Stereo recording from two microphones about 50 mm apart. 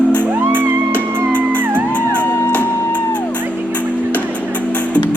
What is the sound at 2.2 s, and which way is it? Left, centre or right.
Music, left.